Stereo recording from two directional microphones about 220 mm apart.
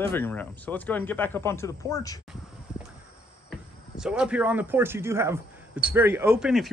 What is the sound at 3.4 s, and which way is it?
Speech, 5° right (ahead or behind).